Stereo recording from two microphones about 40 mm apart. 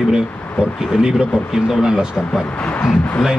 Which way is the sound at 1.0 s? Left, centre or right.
Centre.